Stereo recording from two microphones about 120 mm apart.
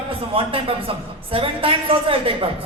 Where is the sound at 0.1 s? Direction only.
50° right (ahead or behind).